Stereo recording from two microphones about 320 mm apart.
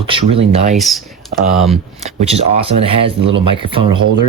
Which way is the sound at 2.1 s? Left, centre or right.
Centre.